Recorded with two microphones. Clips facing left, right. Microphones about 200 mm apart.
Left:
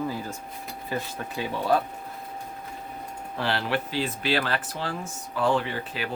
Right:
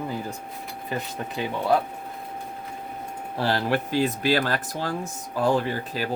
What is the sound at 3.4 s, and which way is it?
Speech, 40° right (ahead or behind).